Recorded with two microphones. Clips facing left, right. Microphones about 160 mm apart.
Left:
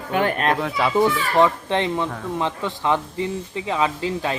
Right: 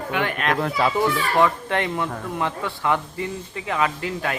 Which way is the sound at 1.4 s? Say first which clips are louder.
Left 2 dB; 20° left (ahead or behind).